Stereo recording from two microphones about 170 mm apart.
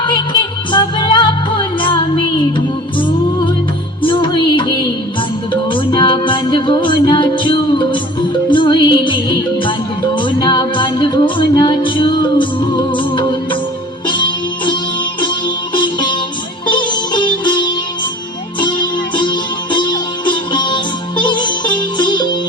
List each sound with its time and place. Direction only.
0.7 s music: 25° left (ahead or behind)
5.7 s music: 30° left (ahead or behind)